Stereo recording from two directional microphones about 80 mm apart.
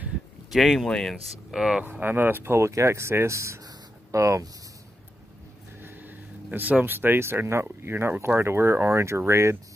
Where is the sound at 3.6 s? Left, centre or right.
Right.